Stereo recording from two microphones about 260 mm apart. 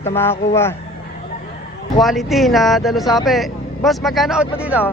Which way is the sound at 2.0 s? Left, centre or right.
Centre.